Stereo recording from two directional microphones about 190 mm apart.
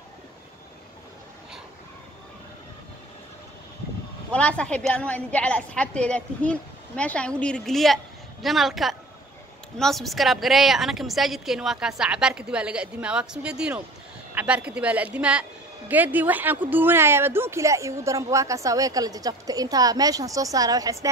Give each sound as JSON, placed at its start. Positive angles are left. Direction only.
{"t": 4.3, "sound": "a woman's voice", "side_deg": 5}